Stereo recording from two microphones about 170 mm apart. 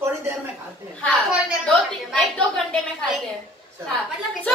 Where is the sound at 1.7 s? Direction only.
5° left (ahead or behind).